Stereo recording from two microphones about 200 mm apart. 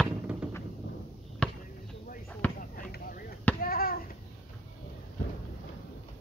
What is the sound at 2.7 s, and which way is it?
Basketball bounce, 45° left (ahead or behind).